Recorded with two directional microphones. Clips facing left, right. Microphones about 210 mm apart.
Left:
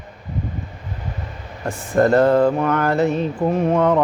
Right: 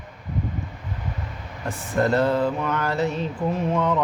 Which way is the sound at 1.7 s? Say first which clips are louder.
Left 6 dB; 50° left (ahead or behind).